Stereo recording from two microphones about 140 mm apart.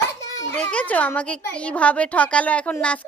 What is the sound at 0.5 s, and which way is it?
A woman's voice, 10° left (ahead or behind).